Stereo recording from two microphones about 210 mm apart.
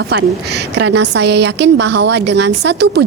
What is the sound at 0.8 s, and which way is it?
A woman's voice, 55° right (ahead or behind).